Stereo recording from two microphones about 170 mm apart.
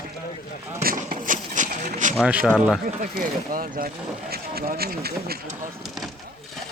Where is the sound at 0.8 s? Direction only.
55° right (ahead or behind).